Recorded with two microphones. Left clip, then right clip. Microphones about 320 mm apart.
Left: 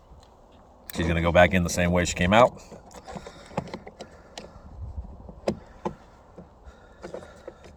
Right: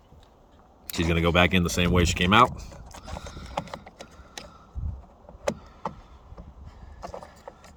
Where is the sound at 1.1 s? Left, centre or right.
Centre.